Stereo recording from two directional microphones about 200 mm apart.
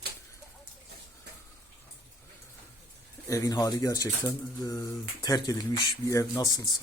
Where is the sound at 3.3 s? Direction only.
15° left (ahead or behind).